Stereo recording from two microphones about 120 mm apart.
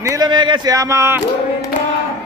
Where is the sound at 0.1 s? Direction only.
35° right (ahead or behind).